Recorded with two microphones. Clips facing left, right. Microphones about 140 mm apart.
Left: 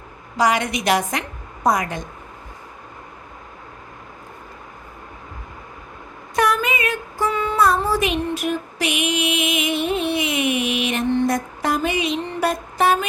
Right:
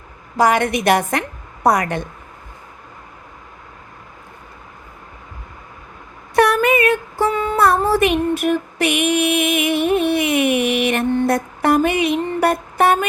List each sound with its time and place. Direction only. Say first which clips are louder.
0.3 s a woman's voice: right 4 dB; 50° right (ahead or behind)
1.6 s a woman's voice: right 3 dB; 65° right (ahead or behind)
6.3 s a sound: right 6 dB; 60° right (ahead or behind)